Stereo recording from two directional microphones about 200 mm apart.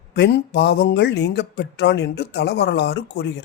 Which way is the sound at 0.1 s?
55° left (ahead or behind).